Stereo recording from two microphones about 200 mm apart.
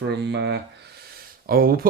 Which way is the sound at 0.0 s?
55° right (ahead or behind).